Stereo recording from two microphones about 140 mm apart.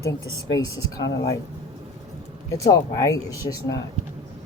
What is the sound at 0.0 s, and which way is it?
Speech, 25° left (ahead or behind).